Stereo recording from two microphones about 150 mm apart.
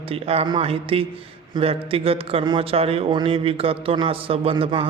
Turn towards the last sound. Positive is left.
turn(degrees=-40)  # may be behind; listen again after turning